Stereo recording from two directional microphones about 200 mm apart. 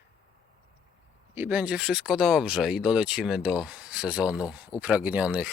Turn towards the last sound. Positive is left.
turn(degrees=-5)  # may be behind; listen again after turning